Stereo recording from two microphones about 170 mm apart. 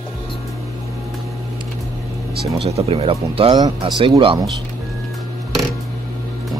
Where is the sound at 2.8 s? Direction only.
35° right (ahead or behind).